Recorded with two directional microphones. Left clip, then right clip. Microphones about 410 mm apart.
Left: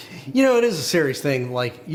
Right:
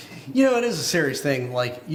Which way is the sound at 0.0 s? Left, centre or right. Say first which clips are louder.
Left 2 dB; left.